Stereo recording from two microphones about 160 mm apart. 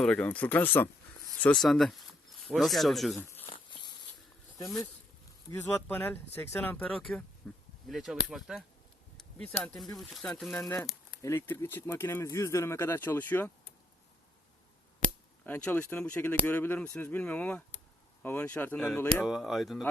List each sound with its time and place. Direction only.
0.0 s speech: 5° left (ahead or behind)
3.2 s speech: 10° left (ahead or behind)
3.4 s insect: 30° left (ahead or behind)
5.5 s speech: 15° left (ahead or behind)
11.2 s speech: 15° left (ahead or behind)
15.4 s speech: 10° left (ahead or behind)
19.2 s speech: centre (ahead or behind)